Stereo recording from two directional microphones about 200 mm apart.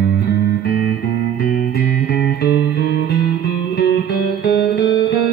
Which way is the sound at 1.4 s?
50° left (ahead or behind).